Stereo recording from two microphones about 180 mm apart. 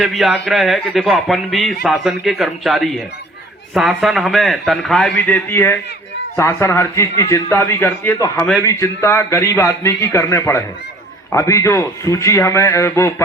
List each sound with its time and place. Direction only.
0.0 s a man's voice: centre (ahead or behind); by 13.2 s 15° left (ahead or behind)